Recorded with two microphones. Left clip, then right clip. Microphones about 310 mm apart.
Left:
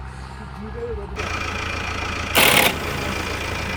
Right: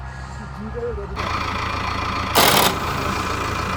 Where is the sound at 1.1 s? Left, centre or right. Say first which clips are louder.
Right 2 dB; right.